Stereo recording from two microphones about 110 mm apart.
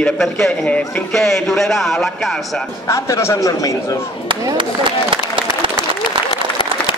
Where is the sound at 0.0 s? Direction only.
5° left (ahead or behind).